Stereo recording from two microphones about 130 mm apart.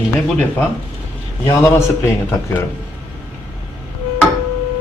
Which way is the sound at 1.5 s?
20° left (ahead or behind).